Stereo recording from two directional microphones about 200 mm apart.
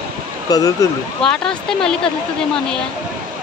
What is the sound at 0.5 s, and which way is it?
Speech, 20° left (ahead or behind).